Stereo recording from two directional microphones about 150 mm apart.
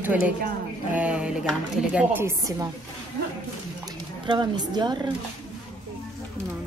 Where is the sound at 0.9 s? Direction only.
5° right (ahead or behind).